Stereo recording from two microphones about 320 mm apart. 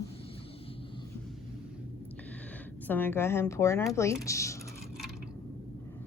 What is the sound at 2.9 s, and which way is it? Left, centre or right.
Speech, centre.